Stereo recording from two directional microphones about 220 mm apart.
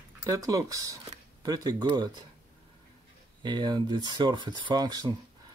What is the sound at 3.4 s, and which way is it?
Speech, 20° right (ahead or behind).